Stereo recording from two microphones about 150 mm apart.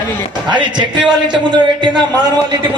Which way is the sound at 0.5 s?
30° right (ahead or behind).